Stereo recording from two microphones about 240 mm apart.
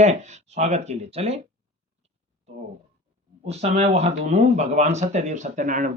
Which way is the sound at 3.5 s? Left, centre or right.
Right.